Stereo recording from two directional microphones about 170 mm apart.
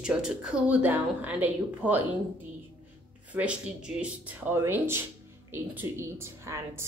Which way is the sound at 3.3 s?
5° right (ahead or behind).